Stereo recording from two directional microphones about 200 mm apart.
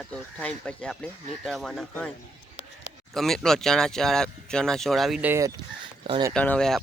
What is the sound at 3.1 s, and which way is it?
Speech, centre (ahead or behind).